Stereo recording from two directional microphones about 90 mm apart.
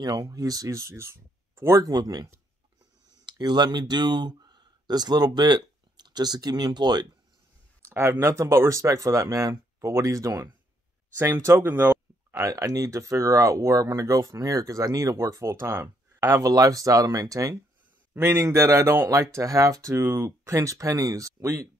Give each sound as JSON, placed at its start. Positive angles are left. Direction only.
{"t": 0.0, "sound": "speech", "side_deg": -45}
{"t": 3.3, "sound": "speech", "side_deg": -50}
{"t": 7.8, "sound": "speech", "side_deg": -30}
{"t": 12.4, "sound": "speech", "side_deg": -35}